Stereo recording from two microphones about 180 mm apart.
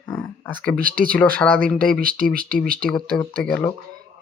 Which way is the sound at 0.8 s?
50° right (ahead or behind).